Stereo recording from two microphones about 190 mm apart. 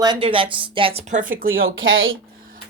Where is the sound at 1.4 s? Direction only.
90° right.